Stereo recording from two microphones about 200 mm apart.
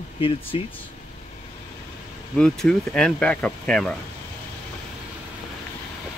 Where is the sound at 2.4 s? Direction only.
5° left (ahead or behind).